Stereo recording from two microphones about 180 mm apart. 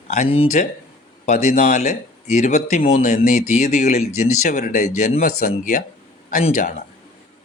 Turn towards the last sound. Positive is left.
turn(degrees=40)  # may be behind; listen again after turning